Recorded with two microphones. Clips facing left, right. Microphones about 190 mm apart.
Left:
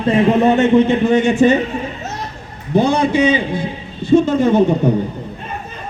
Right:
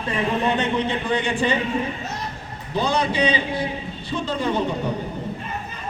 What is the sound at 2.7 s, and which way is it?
A man's voice, 55° left (ahead or behind).